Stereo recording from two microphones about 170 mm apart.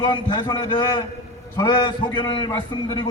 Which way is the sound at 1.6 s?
30° left (ahead or behind).